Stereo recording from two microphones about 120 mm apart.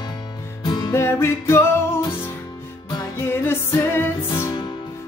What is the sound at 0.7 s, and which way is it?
Music, 35° left (ahead or behind).